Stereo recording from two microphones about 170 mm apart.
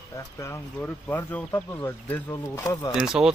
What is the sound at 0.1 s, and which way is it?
Speech, 15° left (ahead or behind).